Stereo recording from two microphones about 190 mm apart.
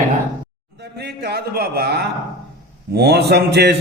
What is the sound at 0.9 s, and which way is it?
Speech, 60° right (ahead or behind).